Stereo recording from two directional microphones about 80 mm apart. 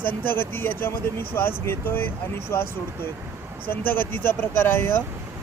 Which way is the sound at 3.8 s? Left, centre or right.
Left.